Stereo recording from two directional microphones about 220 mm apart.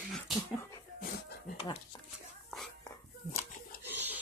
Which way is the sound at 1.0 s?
45° left (ahead or behind).